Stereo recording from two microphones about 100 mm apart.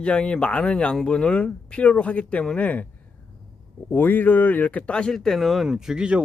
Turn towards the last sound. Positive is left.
turn(degrees=-10)  # may be behind; listen again after turning